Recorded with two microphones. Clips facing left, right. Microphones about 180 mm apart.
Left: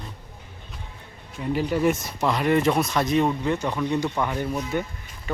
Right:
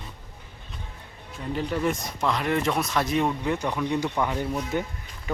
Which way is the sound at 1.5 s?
5° left (ahead or behind).